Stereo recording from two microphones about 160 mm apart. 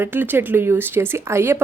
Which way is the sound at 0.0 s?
10° right (ahead or behind).